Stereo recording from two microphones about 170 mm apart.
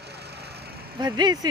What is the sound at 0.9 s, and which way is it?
Speech, 25° right (ahead or behind).